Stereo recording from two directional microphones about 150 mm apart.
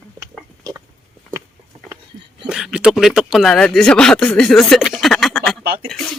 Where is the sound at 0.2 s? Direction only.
25° right (ahead or behind).